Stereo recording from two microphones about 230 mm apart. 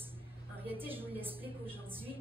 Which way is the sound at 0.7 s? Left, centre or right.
Centre.